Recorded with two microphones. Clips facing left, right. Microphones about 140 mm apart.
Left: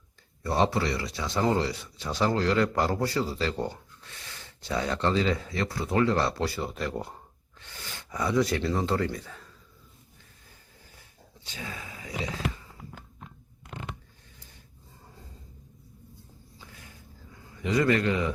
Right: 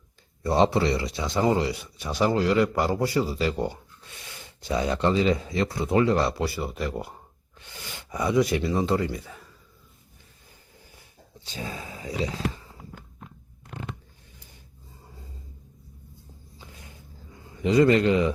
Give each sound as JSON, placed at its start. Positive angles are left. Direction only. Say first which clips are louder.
{"t": 0.4, "sound": "speech", "louder": "right 4 dB", "side_deg": -20}
{"t": 11.4, "sound": "speech", "louder": "right 4 dB", "side_deg": -30}
{"t": 17.6, "sound": "a man's voice", "louder": "right 5 dB", "side_deg": -25}